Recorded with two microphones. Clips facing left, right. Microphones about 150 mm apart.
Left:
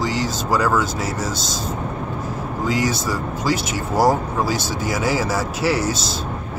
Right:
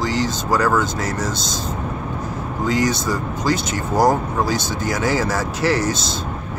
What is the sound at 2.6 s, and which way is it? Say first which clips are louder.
Speech: right 2 dB; 5° left (ahead or behind).